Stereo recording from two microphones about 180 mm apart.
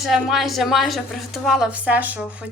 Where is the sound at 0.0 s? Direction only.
Centre (ahead or behind).